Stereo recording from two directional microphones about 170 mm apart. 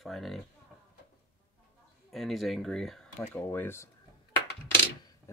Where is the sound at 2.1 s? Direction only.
Centre (ahead or behind).